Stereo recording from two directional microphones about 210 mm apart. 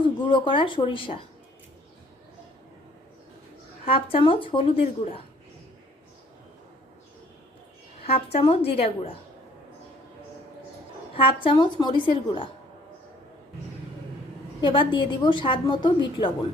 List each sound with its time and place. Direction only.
0.3 s a woman's voice: 25° left (ahead or behind)
3.8 s a woman's voice: 25° left (ahead or behind)
8.0 s a woman's voice: 30° left (ahead or behind)
11.2 s a woman's voice: 25° left (ahead or behind)
14.6 s a woman's voice: 25° left (ahead or behind)